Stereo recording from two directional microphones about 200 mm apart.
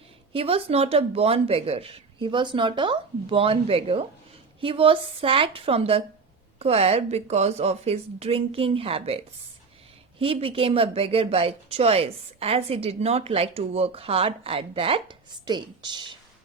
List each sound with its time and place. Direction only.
0.3 s a woman's voice: 30° right (ahead or behind)